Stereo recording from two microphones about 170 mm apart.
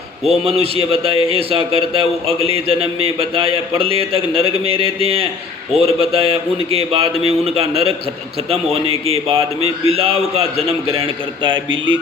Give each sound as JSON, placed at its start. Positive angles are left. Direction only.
{"t": 0.3, "sound": "a man's voice", "side_deg": -35}